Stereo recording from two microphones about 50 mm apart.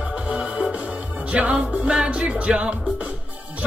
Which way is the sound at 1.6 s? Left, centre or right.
Centre.